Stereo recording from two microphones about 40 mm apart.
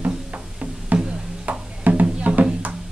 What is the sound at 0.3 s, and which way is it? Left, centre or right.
Music, right.